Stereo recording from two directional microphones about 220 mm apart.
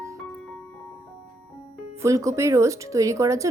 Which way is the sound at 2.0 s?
15° right (ahead or behind).